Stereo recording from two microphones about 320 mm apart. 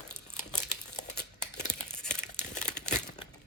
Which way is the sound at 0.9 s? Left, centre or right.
Left.